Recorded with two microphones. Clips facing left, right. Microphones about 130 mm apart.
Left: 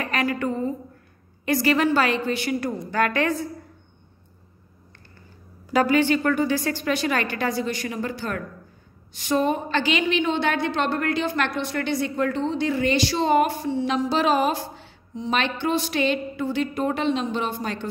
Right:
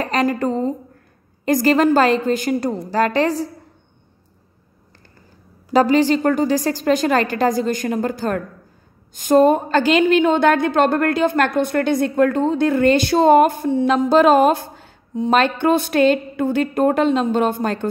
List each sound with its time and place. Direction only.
0.0 s a woman's voice: 35° right (ahead or behind)
5.7 s a woman's voice: 35° right (ahead or behind); by 17.8 s 50° right (ahead or behind)